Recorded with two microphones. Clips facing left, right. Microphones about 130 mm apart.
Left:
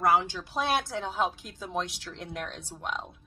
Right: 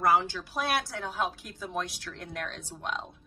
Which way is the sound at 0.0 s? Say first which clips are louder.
Even; 15° left (ahead or behind).